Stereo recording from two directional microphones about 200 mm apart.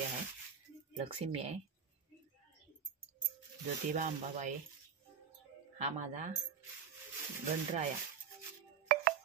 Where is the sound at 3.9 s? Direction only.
40° right (ahead or behind).